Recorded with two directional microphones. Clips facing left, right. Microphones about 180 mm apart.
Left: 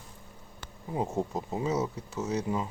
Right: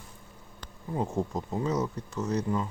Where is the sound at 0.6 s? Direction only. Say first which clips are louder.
Even; 10° left (ahead or behind).